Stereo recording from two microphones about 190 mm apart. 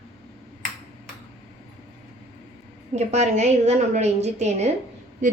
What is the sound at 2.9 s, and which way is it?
A woman's voice, 35° right (ahead or behind).